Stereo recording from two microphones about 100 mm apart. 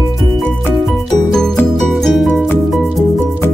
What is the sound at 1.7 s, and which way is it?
Music, centre (ahead or behind).